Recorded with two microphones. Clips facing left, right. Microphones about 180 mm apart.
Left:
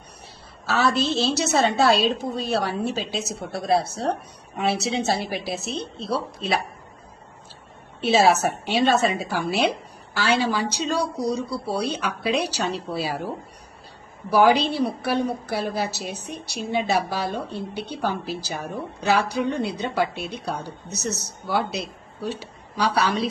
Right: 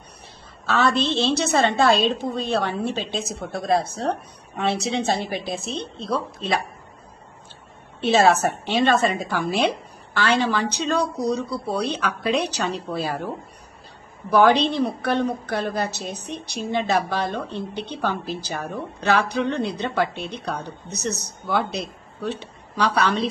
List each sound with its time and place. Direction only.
0.7 s a woman's voice: 5° left (ahead or behind)
8.0 s a woman's voice: 5° left (ahead or behind)